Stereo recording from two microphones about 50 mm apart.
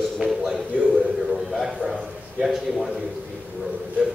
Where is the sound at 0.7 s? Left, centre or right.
Right.